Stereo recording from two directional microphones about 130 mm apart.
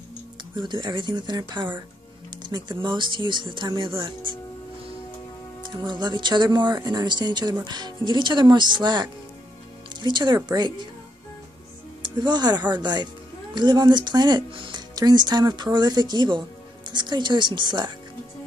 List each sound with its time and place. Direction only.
0.7 s speech: 35° right (ahead or behind)
5.7 s speech: 35° right (ahead or behind)
12.0 s speech: 35° right (ahead or behind)